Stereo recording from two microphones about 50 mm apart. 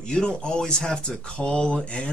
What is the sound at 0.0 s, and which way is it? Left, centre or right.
Speech, centre.